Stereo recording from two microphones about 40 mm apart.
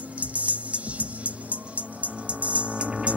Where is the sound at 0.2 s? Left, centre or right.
Right.